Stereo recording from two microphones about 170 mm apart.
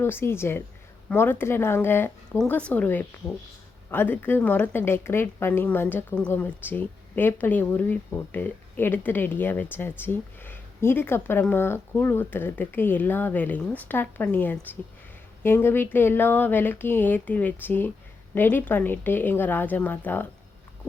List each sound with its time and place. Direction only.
0.0 s a woman's voice: 15° left (ahead or behind)